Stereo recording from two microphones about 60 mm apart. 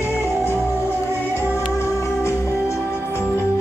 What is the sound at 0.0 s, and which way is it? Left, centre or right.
Music, left.